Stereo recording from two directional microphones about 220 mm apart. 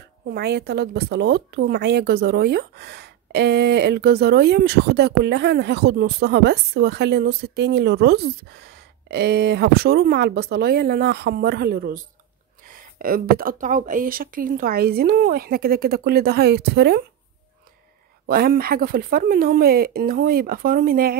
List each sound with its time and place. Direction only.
0.3 s a woman's voice: 45° right (ahead or behind)
18.2 s a woman's voice: 45° right (ahead or behind)